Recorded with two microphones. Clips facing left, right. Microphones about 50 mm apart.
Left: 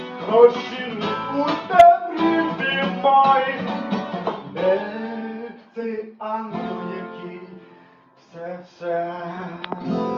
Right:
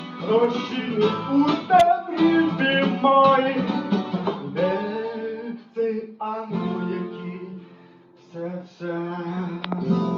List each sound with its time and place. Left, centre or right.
0.0 s music: left
8.4 s a sound: left
9.8 s music: left